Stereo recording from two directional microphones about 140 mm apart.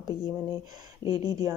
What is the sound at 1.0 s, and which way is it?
Speech, 30° left (ahead or behind).